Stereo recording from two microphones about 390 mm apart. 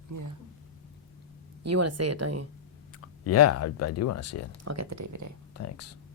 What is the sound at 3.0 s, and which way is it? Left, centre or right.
Speech, left.